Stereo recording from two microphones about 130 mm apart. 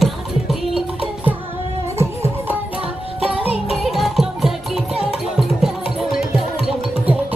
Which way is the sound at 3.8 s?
Centre (ahead or behind).